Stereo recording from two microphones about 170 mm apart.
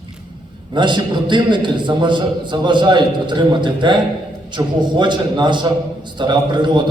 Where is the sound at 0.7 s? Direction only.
25° right (ahead or behind).